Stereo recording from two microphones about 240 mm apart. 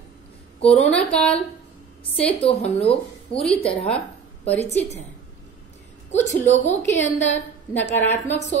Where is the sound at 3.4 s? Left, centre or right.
Centre.